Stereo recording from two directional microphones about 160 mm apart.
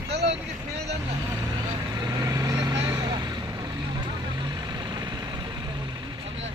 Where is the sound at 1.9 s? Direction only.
20° right (ahead or behind).